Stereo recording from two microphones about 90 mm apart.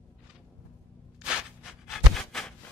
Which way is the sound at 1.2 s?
10° right (ahead or behind).